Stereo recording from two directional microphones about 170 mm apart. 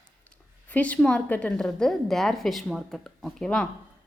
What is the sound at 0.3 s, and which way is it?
A woman's voice, 10° left (ahead or behind).